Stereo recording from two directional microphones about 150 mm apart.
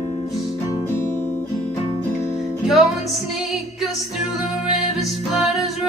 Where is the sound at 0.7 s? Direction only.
20° left (ahead or behind).